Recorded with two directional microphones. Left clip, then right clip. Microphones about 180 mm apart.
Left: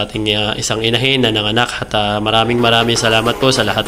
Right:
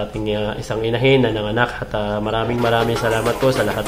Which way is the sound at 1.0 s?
20° left (ahead or behind).